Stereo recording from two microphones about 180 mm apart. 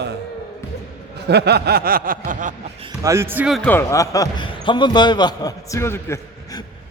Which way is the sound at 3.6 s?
10° left (ahead or behind).